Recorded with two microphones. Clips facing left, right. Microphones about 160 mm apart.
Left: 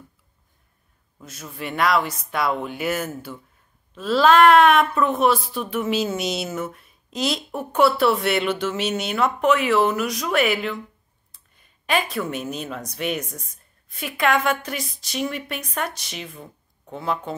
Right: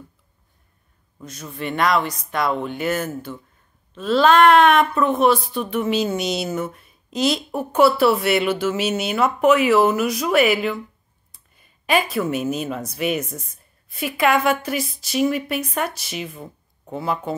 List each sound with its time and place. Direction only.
1.2 s a woman's voice: 5° left (ahead or behind)